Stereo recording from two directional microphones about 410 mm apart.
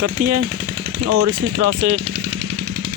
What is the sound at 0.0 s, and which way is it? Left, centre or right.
Speech, right.